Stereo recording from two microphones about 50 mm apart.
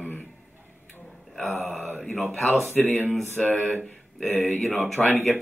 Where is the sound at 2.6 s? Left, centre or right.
Left.